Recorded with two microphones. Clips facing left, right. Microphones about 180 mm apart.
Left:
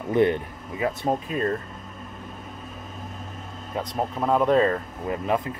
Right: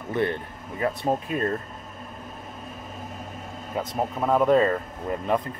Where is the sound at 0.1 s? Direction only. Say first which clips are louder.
Left 5 dB; 15° left (ahead or behind).